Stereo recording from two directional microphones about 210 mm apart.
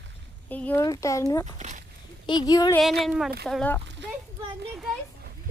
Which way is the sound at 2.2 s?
20° left (ahead or behind).